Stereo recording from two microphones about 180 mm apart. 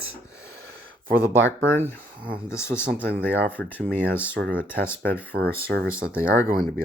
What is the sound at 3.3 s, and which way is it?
Speech, 10° left (ahead or behind).